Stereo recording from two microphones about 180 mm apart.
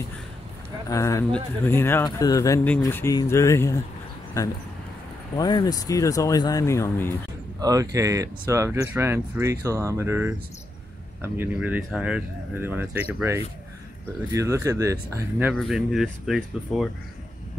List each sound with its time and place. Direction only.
0.8 s speech: 15° left (ahead or behind)
5.4 s speech: 25° left (ahead or behind)
7.6 s speech: 20° right (ahead or behind)
11.3 s speech: 10° right (ahead or behind)
15.5 s speech: centre (ahead or behind)